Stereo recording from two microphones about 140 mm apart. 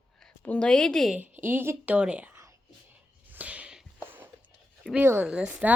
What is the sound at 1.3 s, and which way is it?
Speech, 15° right (ahead or behind).